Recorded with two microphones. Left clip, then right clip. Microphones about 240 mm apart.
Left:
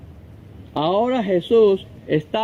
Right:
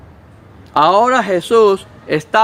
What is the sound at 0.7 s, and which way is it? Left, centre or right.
Speech, right.